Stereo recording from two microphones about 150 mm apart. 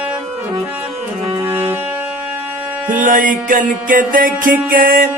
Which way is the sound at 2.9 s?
60° right (ahead or behind).